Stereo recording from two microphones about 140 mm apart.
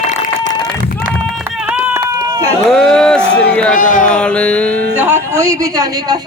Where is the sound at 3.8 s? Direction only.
75° left (ahead or behind).